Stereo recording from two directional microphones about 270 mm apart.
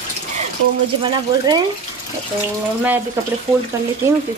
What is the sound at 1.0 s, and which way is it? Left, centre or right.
Speech, centre.